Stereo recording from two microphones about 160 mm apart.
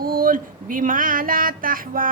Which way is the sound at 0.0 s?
65° right (ahead or behind).